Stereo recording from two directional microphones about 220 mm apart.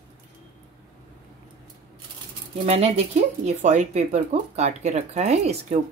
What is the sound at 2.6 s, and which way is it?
Speech, 30° right (ahead or behind).